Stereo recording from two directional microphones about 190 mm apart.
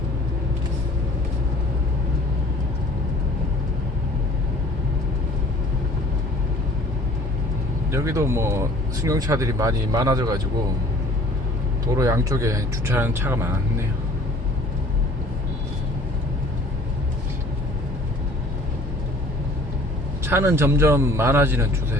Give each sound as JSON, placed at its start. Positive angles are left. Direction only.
{"t": 7.9, "sound": "speech", "side_deg": -15}
{"t": 11.9, "sound": "speech", "side_deg": -15}
{"t": 20.2, "sound": "speech", "side_deg": -10}